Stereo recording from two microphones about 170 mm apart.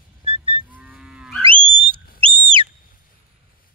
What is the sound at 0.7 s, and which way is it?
Livestock, 10° right (ahead or behind).